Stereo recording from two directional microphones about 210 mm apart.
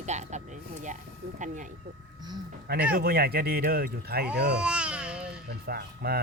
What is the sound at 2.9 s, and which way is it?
Speech, 45° right (ahead or behind).